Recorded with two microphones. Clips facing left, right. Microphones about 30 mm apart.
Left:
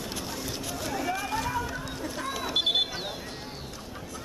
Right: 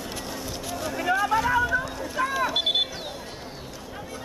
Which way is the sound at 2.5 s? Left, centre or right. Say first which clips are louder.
Right 2 dB; centre.